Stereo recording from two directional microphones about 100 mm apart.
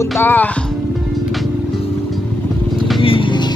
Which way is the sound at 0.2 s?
20° left (ahead or behind).